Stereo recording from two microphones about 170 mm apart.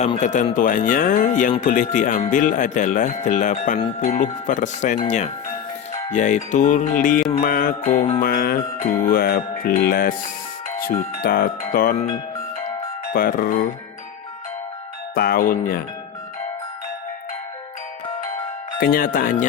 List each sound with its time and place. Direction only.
0.0 s speech: 45° left (ahead or behind)
7.4 s speech: 55° left (ahead or behind)
8.2 s music: 60° left (ahead or behind)
11.2 s music: 65° left (ahead or behind)
13.1 s music: 60° left (ahead or behind)
15.1 s music: 60° left (ahead or behind)
18.8 s music: 60° left (ahead or behind)